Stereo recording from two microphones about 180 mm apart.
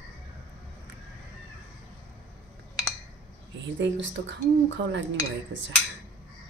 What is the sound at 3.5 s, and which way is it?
Speech, 80° right.